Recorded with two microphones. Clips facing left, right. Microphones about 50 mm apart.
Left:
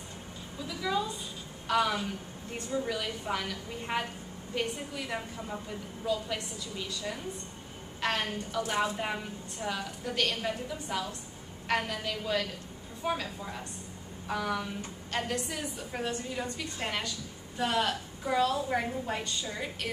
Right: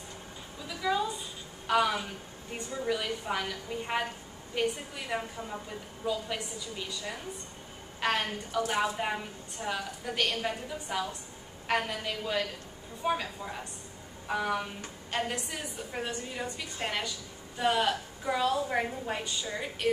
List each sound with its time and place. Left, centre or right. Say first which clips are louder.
1.7 s a woman's voice: right 1 dB; centre
8.0 s a woman's voice: right 1 dB; centre